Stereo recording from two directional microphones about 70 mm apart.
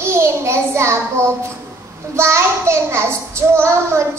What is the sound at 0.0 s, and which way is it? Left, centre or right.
Child singing, right.